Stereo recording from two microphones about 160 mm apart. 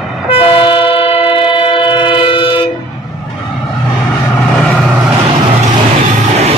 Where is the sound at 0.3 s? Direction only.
35° left (ahead or behind).